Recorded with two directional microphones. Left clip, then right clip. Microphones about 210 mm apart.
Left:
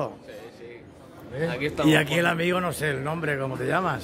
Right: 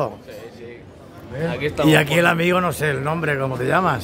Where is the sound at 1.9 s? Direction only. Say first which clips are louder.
Right 6 dB; 15° right (ahead or behind).